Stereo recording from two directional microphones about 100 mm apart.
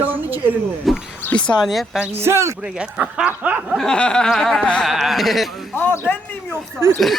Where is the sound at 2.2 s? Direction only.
25° right (ahead or behind).